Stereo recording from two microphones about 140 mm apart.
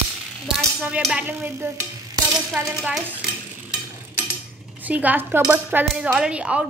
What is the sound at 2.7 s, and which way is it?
Speech, 5° right (ahead or behind).